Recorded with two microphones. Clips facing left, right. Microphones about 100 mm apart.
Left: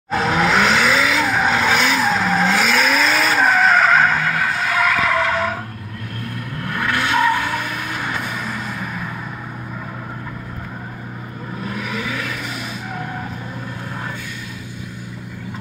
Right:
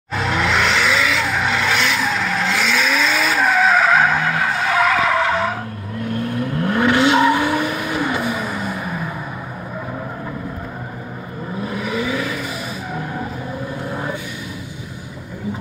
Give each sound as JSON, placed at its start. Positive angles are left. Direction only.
{"t": 0.1, "sound": "tire squeal", "side_deg": 10}
{"t": 1.3, "sound": "vehicle", "side_deg": 10}
{"t": 6.6, "sound": "vehicle", "side_deg": -20}
{"t": 11.7, "sound": "vehicle", "side_deg": -5}